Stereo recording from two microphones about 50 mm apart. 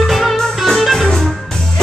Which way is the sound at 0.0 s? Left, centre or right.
Centre.